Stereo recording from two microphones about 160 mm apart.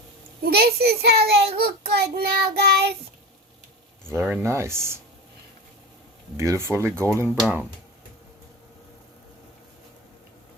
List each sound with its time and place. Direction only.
0.5 s a child's voice: 80° right
4.1 s speech: 10° right (ahead or behind)
6.3 s speech: 20° right (ahead or behind)